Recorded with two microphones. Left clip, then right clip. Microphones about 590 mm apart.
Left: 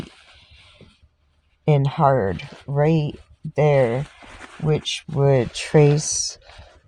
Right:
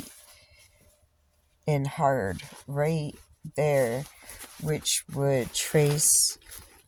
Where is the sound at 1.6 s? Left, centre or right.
Centre.